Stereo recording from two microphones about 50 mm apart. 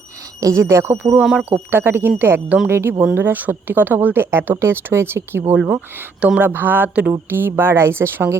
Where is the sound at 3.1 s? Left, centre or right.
Right.